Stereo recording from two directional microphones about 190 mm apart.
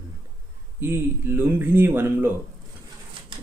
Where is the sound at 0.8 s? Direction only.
10° right (ahead or behind).